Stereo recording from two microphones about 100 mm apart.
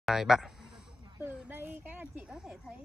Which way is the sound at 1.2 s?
15° right (ahead or behind).